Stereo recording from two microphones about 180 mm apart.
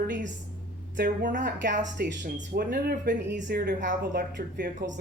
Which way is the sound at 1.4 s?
80° right.